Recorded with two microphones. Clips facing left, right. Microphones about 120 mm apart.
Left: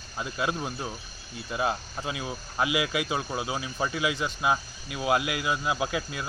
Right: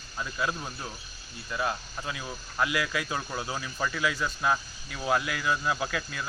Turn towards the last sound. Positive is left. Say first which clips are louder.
# left 3 dB
turn(degrees=20)  # may be behind; listen again after turning